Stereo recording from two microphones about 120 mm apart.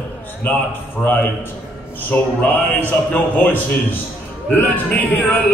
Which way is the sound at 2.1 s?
15° left (ahead or behind).